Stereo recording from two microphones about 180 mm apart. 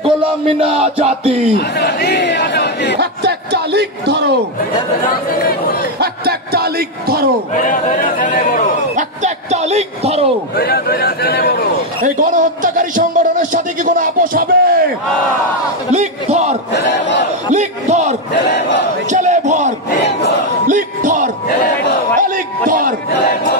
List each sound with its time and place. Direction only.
0.0 s a sound: 30° right (ahead or behind)
1.8 s crowd: 65° left (ahead or behind)
3.0 s a man's voice: 65° right (ahead or behind)
5.9 s speech: 60° right (ahead or behind)
7.5 s speech: 40° left (ahead or behind)
8.9 s speech: 40° right (ahead or behind)
10.5 s a man's voice: 60° left (ahead or behind)
12.2 s a man's voice: 45° right (ahead or behind)
15.9 s a sound: 40° right (ahead or behind)
16.7 s battle cry: 70° left (ahead or behind)
17.6 s a sound: 40° right (ahead or behind)
18.3 s crowd: 65° left (ahead or behind)
19.0 s a sound: 40° right (ahead or behind)